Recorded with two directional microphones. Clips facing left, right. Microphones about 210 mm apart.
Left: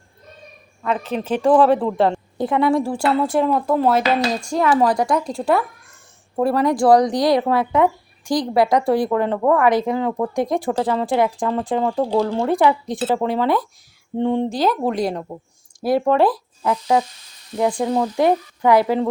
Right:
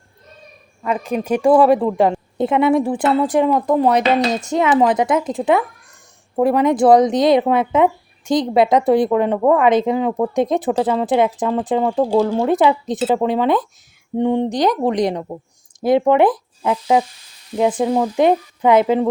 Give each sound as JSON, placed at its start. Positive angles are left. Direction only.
{"t": 0.8, "sound": "speech", "side_deg": -10}
{"t": 2.4, "sound": "speech", "side_deg": -20}
{"t": 11.9, "sound": "speech", "side_deg": -5}
{"t": 12.5, "sound": "speech", "side_deg": -20}